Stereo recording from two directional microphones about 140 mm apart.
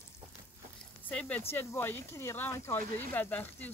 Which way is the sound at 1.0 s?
10° left (ahead or behind).